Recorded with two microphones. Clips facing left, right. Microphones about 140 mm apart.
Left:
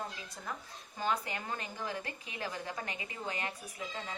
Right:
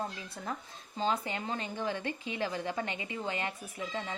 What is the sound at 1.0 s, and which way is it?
A woman's voice, 25° right (ahead or behind).